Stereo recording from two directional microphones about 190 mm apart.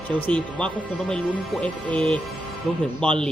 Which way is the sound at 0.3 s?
5° left (ahead or behind).